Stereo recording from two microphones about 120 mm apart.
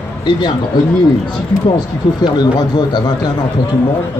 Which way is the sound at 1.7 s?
35° left (ahead or behind).